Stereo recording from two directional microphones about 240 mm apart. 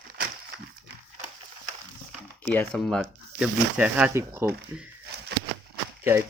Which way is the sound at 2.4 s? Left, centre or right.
Centre.